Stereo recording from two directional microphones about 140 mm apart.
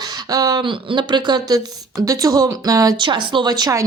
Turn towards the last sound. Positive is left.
turn(degrees=-30)  # may be behind; listen again after turning